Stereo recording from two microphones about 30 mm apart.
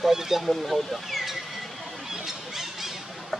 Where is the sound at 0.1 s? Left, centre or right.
Centre.